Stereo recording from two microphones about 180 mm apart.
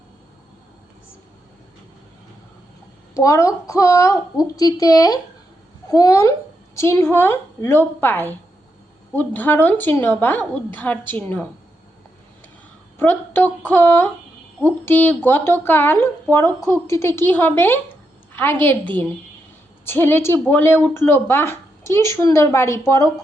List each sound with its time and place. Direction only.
3.2 s a woman's voice: 20° left (ahead or behind)
13.0 s a woman's voice: 10° left (ahead or behind)